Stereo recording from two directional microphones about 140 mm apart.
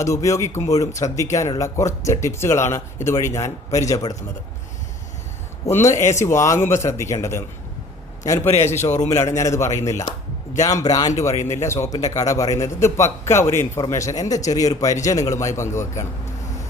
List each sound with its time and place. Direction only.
0.0 s speech: 25° left (ahead or behind)
5.6 s speech: 20° left (ahead or behind)
8.4 s a man's voice: 50° left (ahead or behind)
9.1 s speech: 20° left (ahead or behind)